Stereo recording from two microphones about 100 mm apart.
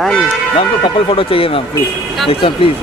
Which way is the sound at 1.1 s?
65° left (ahead or behind).